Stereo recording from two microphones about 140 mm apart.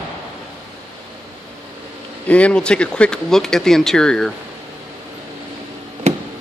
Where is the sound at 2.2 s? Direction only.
10° left (ahead or behind).